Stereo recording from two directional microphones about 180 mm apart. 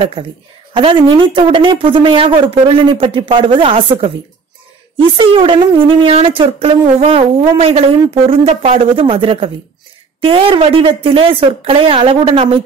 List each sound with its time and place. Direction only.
0.2 s speech: 25° right (ahead or behind)
5.1 s speech: 30° right (ahead or behind)